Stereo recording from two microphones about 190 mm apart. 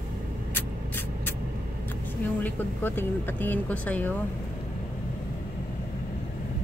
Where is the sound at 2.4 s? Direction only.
10° left (ahead or behind).